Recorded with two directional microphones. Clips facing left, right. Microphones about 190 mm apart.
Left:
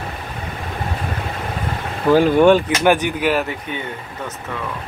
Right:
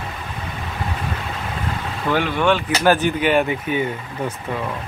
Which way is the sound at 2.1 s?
40° left (ahead or behind).